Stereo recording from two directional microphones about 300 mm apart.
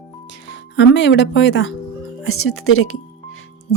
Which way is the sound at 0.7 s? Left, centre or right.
Left.